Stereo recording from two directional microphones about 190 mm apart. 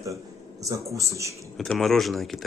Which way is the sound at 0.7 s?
15° right (ahead or behind).